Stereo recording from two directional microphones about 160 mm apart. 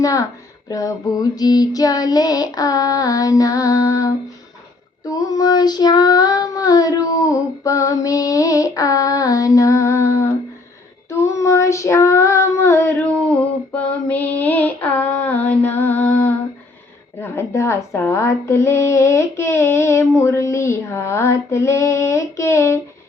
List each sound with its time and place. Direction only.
0.0 s child singing: 20° left (ahead or behind)
11.1 s female singing: 20° left (ahead or behind)
17.2 s speech: 15° left (ahead or behind)